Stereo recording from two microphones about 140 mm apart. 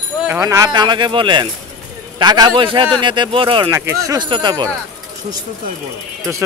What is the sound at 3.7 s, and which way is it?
Speech, 20° right (ahead or behind).